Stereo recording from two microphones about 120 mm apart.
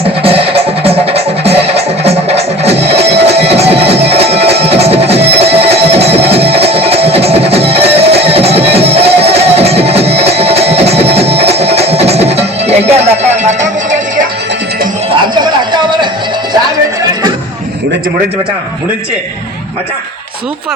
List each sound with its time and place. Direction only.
0.0 s music: 50° right (ahead or behind); by 13.7 s 75° right (ahead or behind)